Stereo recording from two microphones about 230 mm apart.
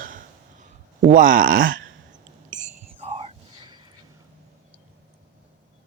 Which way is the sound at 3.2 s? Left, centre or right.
Right.